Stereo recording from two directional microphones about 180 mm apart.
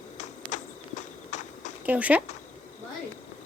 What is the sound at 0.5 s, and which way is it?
Walk, 40° left (ahead or behind).